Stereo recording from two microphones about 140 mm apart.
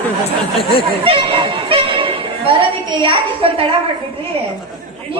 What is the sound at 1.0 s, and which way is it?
Speech, 40° right (ahead or behind).